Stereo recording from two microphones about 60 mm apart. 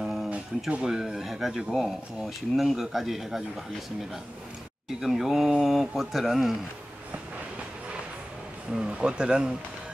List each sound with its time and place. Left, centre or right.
0.0 s a sound: centre
0.8 s speech: centre
5.0 s speech: centre
8.7 s speech: centre